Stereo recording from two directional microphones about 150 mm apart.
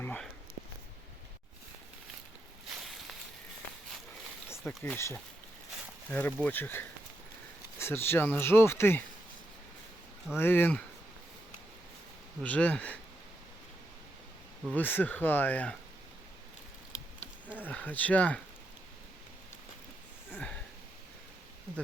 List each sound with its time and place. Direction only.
0.0 s a sound: 10° left (ahead or behind)
4.4 s a sound: 15° left (ahead or behind)
4.8 s speech: 15° left (ahead or behind)
10.3 s speech: 15° left (ahead or behind)
12.4 s speech: 10° left (ahead or behind)
14.8 s speech: 10° left (ahead or behind)
17.7 s speech: 10° left (ahead or behind)
20.3 s sniff: 10° left (ahead or behind)